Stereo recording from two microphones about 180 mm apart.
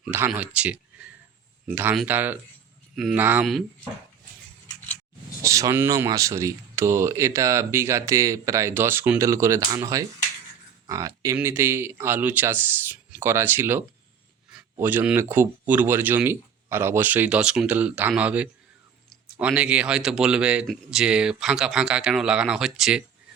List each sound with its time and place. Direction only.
0.0 s speech: 5° right (ahead or behind)
5.4 s speech: 15° right (ahead or behind)